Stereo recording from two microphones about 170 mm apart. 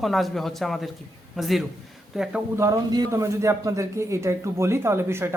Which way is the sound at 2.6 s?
20° right (ahead or behind).